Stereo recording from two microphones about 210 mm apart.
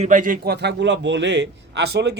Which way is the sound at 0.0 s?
35° right (ahead or behind).